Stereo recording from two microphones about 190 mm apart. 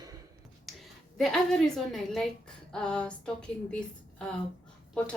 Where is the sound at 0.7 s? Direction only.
Centre (ahead or behind).